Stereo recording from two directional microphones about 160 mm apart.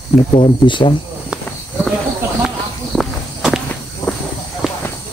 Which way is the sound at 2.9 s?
Centre (ahead or behind).